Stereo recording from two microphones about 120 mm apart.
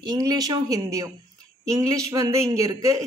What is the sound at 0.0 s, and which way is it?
A woman's voice, 35° right (ahead or behind).